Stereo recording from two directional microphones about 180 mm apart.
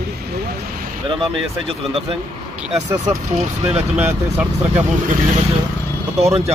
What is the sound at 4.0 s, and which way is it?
Speech, 10° right (ahead or behind).